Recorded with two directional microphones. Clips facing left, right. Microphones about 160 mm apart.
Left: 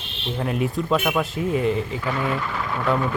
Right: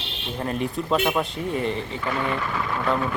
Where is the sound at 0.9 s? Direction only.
15° right (ahead or behind).